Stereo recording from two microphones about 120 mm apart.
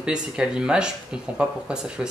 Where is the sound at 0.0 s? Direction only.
5° right (ahead or behind).